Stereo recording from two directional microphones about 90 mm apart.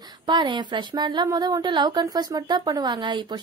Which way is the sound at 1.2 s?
45° right (ahead or behind).